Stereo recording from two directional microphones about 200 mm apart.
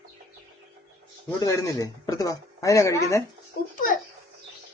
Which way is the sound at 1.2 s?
15° left (ahead or behind).